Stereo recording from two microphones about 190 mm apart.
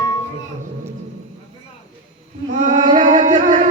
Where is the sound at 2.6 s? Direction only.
40° right (ahead or behind).